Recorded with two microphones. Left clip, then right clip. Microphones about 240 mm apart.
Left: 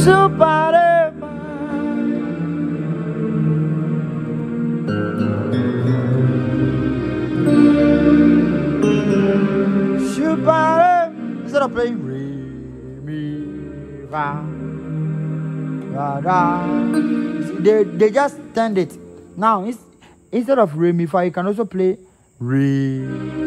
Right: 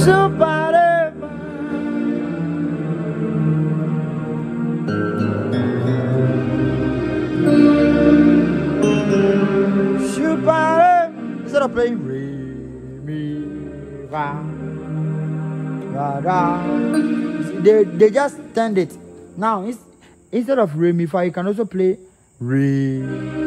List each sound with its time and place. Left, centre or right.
0.0 s music: left
1.8 s music: centre
5.4 s music: centre
9.9 s music: left
13.1 s mantra: left
15.9 s music: left
16.9 s music: centre
17.4 s speech: left
19.4 s music: left
20.3 s a man's voice: left
22.5 s music: left